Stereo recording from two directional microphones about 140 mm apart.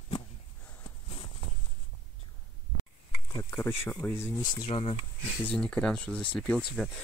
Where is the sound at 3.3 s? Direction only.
20° left (ahead or behind).